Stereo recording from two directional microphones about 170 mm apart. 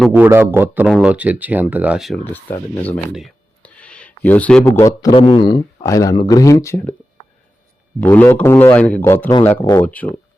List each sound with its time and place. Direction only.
0.1 s speech: 15° right (ahead or behind)
2.3 s a man's voice: 10° left (ahead or behind)
3.2 s a sound: 5° left (ahead or behind)
4.9 s a man's voice: 30° left (ahead or behind)
5.8 s speech: 20° left (ahead or behind)
8.0 s a man's voice: 10° left (ahead or behind)